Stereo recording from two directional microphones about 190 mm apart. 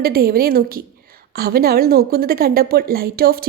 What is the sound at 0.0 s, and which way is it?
Speech, 50° right (ahead or behind).